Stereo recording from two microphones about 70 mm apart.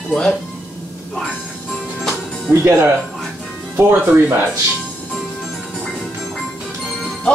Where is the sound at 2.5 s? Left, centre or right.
Right.